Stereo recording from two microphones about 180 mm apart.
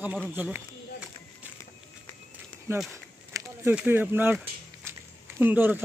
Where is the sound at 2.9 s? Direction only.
15° right (ahead or behind).